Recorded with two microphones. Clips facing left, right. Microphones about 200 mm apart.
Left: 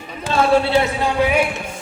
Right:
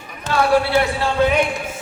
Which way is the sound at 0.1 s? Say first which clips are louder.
Left 1 dB; 25° left (ahead or behind).